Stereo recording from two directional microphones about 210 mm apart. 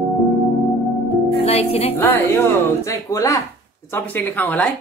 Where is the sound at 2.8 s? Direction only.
15° left (ahead or behind).